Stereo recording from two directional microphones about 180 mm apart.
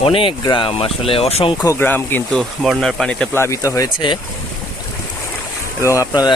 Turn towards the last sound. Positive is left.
turn(degrees=20)  # may be behind; listen again after turning